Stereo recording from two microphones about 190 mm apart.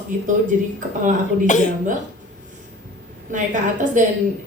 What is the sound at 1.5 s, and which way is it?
Speech, 40° left (ahead or behind).